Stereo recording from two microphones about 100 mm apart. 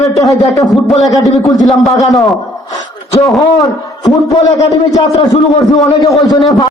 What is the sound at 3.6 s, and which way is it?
A man's voice, 40° left (ahead or behind).